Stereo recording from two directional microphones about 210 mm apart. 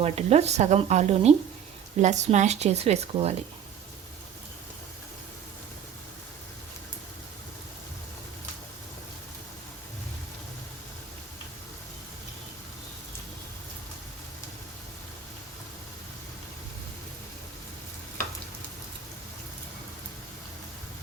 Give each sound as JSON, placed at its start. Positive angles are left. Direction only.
{"t": 0.0, "sound": "speech", "side_deg": -30}